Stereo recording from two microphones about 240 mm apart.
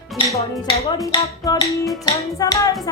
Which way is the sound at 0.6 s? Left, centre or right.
Centre.